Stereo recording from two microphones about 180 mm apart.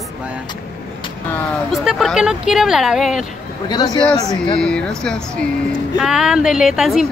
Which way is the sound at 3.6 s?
25° left (ahead or behind).